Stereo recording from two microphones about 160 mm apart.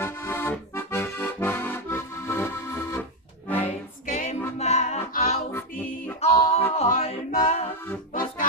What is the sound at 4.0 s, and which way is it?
Music, 50° left (ahead or behind).